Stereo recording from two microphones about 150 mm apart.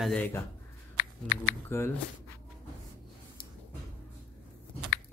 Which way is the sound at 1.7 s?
15° left (ahead or behind).